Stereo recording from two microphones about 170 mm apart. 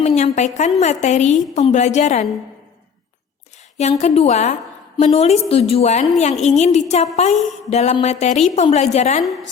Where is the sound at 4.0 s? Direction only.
40° left (ahead or behind).